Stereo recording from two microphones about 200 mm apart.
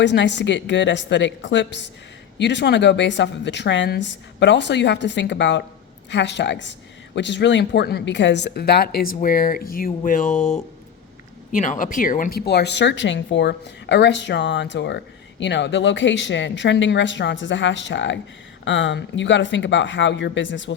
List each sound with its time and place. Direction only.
0.0 s speech: 60° left (ahead or behind)